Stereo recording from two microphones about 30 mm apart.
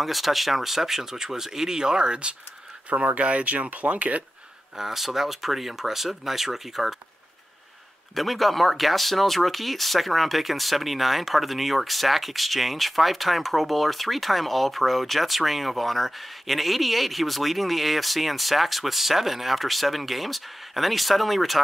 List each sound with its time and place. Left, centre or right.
0.0 s speech: centre; by 2.3 s right
2.9 s speech: right
4.7 s speech: centre
8.1 s speech: centre